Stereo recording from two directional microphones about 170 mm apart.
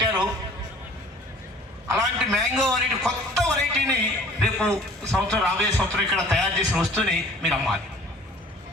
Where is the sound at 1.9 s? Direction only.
Centre (ahead or behind).